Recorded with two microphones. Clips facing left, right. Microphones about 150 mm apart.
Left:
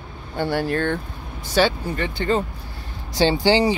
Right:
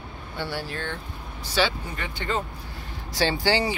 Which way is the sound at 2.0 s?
35° left (ahead or behind).